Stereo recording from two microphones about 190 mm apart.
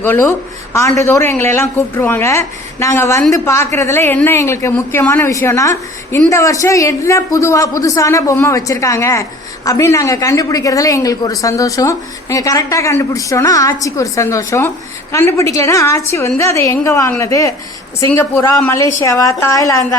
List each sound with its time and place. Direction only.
0.0 s a woman's voice: 10° left (ahead or behind)